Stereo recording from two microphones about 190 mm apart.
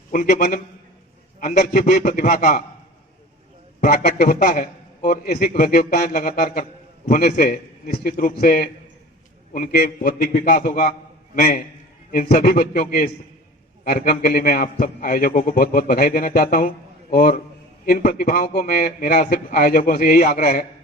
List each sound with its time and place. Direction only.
0.1 s a man's voice: 45° left (ahead or behind)
3.8 s a man's voice: 50° left (ahead or behind)